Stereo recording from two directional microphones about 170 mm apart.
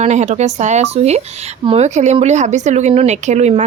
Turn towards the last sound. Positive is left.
turn(degrees=-40)  # may be behind; listen again after turning